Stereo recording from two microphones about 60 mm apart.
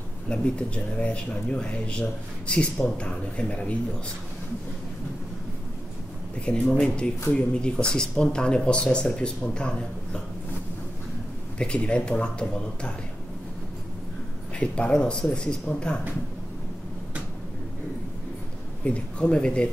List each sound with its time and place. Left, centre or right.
0.3 s speech: centre
6.4 s speech: centre
11.5 s speech: centre
14.6 s speech: centre
18.9 s speech: centre